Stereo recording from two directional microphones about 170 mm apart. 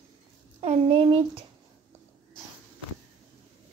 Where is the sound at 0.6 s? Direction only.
35° right (ahead or behind).